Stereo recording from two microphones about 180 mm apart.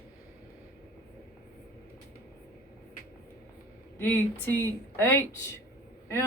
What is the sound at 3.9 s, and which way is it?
Speech, 10° left (ahead or behind).